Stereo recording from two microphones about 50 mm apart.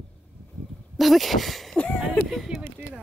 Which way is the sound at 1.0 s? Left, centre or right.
Centre.